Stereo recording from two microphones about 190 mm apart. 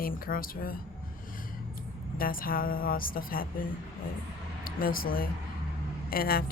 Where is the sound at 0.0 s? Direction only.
50° left (ahead or behind).